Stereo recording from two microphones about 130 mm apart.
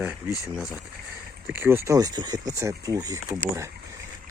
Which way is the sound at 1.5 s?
15° right (ahead or behind).